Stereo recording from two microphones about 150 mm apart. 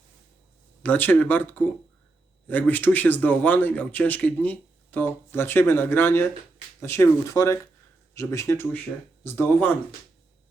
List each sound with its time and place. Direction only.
0.8 s speech: 10° left (ahead or behind)